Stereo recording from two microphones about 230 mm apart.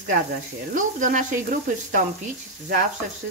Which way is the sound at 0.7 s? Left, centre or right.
Right.